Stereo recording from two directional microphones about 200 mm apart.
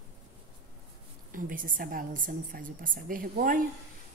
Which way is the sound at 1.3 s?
45° right (ahead or behind).